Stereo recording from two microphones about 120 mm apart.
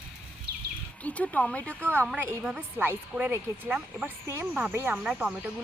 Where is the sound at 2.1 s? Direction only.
20° right (ahead or behind).